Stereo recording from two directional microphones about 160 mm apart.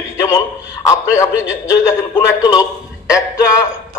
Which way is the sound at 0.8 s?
20° left (ahead or behind).